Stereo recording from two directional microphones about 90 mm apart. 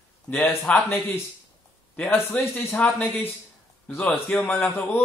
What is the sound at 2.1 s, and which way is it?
Speech, 20° left (ahead or behind).